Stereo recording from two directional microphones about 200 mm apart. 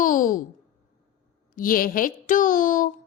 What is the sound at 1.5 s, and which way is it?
Speech, 45° left (ahead or behind).